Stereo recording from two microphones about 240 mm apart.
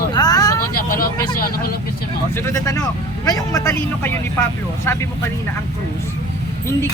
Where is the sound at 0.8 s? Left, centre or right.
Left.